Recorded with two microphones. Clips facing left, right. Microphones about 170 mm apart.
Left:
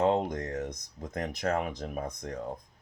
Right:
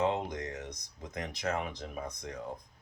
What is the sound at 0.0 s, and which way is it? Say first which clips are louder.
Speech: left 5 dB; 50° left (ahead or behind).